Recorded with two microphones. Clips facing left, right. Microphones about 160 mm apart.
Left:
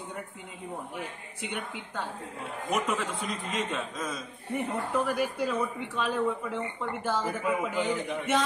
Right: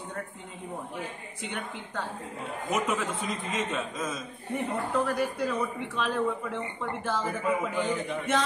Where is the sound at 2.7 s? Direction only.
5° right (ahead or behind).